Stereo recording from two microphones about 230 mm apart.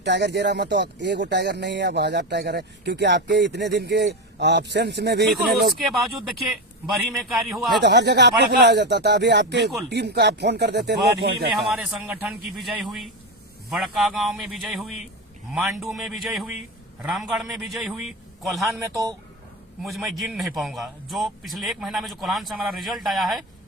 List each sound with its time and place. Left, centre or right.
0.0 s speech: right
5.3 s a man's voice: centre
7.2 s a man's voice: centre
7.8 s speech: right
11.6 s a man's voice: centre
19.8 s a man's voice: centre